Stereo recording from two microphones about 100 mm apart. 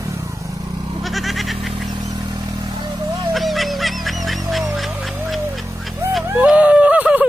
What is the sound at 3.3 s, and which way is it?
Music, centre (ahead or behind).